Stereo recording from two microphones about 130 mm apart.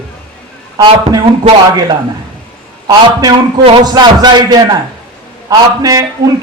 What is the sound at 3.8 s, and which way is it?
A man's voice, 35° right (ahead or behind).